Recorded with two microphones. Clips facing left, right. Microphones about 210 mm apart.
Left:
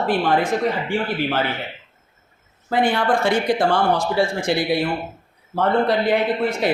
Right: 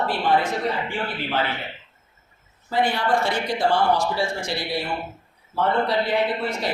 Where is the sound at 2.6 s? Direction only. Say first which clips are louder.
Left 3 dB; 50° left (ahead or behind).